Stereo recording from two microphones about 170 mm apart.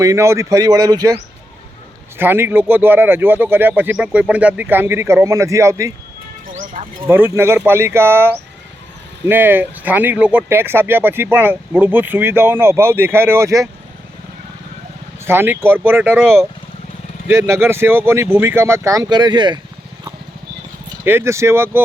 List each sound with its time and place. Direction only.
0.0 s speech: 20° right (ahead or behind)
6.5 s music: 50° right (ahead or behind)
7.1 s speech: 15° right (ahead or behind)
15.2 s speech: 15° right (ahead or behind)
21.0 s speech: 15° right (ahead or behind)